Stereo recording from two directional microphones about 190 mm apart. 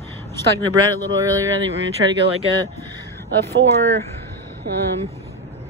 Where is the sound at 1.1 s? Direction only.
15° right (ahead or behind).